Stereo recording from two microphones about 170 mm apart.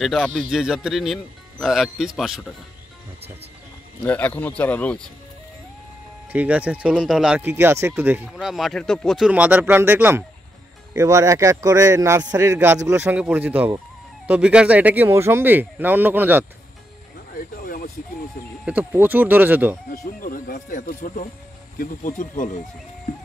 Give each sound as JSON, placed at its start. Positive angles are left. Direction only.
{"t": 0.0, "sound": "speech", "side_deg": 0}
{"t": 4.0, "sound": "speech", "side_deg": 10}
{"t": 6.3, "sound": "speech", "side_deg": -10}
{"t": 17.3, "sound": "a sound", "side_deg": 60}
{"t": 18.7, "sound": "speech", "side_deg": -10}
{"t": 19.9, "sound": "speech", "side_deg": 55}